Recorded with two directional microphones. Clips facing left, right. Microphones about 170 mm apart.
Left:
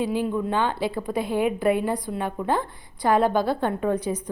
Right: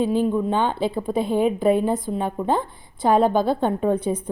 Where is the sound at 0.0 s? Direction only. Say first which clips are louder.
Right 4 dB; 10° left (ahead or behind).